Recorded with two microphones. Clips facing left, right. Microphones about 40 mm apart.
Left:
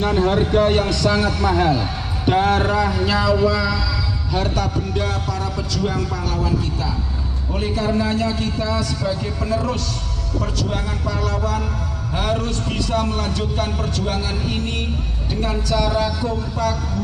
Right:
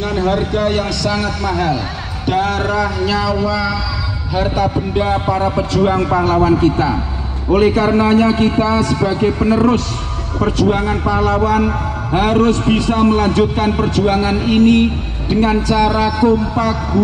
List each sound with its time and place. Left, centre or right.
0.0 s a sound: centre
0.7 s a man's voice: centre
4.3 s a man's voice: centre; by 17.0 s right